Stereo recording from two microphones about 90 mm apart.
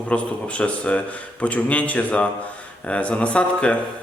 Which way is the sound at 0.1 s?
15° left (ahead or behind).